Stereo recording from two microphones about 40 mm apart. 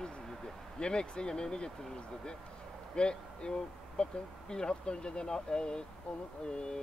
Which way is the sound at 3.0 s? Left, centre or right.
Left.